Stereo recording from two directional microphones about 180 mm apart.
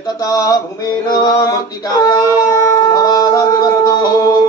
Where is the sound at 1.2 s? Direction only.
20° left (ahead or behind).